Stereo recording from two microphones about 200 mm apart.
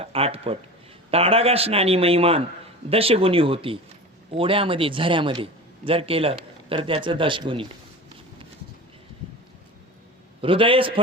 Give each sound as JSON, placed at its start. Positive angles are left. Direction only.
{"t": 0.0, "sound": "a man's voice", "side_deg": -30}
{"t": 10.4, "sound": "a man's voice", "side_deg": -25}